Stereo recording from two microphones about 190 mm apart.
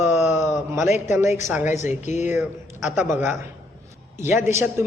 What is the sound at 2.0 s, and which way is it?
Speech, 40° left (ahead or behind).